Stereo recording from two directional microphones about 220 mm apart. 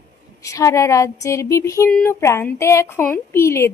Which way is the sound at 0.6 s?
15° left (ahead or behind).